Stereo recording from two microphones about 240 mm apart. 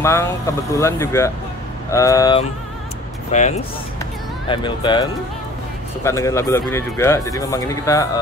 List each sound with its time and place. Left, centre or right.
0.0 s speech: centre
3.3 s speech: left
4.0 s music: centre
6.0 s speech: centre